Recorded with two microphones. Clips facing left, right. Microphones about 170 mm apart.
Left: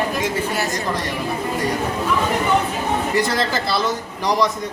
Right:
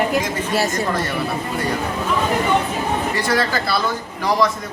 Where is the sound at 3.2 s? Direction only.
20° left (ahead or behind).